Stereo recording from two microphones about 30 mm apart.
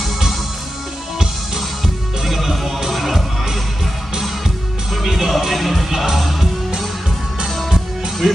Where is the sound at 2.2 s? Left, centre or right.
Centre.